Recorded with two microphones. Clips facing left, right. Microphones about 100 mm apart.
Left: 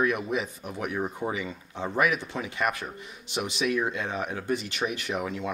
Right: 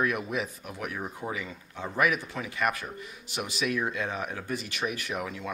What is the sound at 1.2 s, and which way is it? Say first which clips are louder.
Speech: left 3 dB; 10° left (ahead or behind).